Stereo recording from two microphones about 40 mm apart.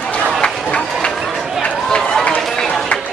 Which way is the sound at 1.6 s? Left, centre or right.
Left.